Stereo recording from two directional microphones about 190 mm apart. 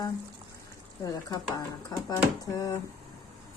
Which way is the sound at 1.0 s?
20° left (ahead or behind).